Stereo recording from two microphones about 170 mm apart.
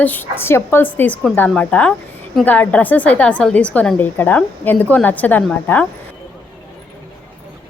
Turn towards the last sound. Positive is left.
turn(degrees=5)  # may be behind; listen again after turning